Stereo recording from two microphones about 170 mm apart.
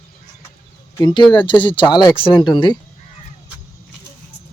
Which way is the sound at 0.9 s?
25° left (ahead or behind).